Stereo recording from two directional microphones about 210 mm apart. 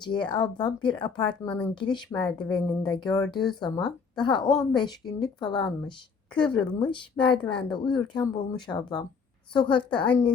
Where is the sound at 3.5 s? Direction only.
20° left (ahead or behind).